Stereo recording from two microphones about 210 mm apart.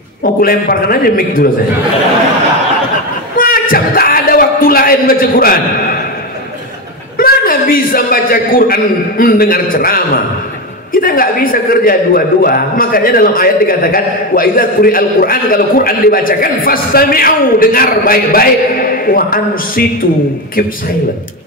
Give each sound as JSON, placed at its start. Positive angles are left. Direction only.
{"t": 0.2, "sound": "a man's voice", "side_deg": 45}
{"t": 3.3, "sound": "a sound", "side_deg": 40}
{"t": 7.2, "sound": "a man's voice", "side_deg": 45}